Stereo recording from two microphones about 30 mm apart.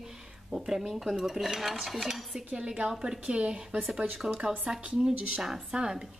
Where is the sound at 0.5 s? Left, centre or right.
Centre.